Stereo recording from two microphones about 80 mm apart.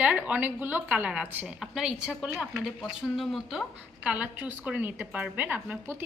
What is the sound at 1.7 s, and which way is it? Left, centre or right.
A woman's voice, centre.